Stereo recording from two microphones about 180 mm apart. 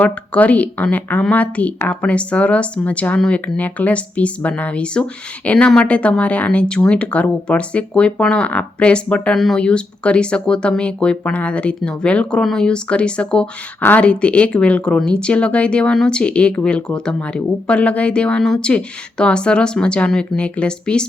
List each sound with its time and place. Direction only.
0.0 s speech: 10° left (ahead or behind)